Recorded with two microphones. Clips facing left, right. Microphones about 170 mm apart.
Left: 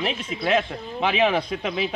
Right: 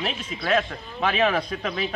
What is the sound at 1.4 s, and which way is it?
Speech, 15° left (ahead or behind).